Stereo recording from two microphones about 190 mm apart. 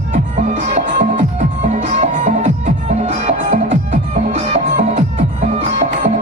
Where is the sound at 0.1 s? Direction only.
40° right (ahead or behind).